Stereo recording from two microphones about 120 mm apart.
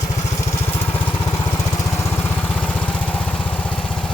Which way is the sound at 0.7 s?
15° left (ahead or behind).